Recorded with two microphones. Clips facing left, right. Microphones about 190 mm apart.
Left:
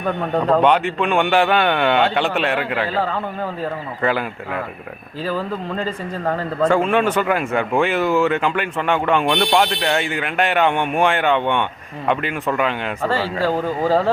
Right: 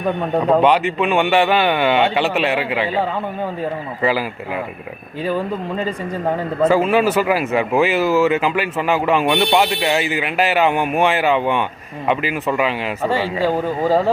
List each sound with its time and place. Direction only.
0.3 s speech: 5° right (ahead or behind)
5.2 s speech: 15° right (ahead or behind)